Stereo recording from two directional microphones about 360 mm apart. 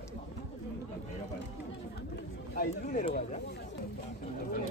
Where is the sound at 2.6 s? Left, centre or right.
Left.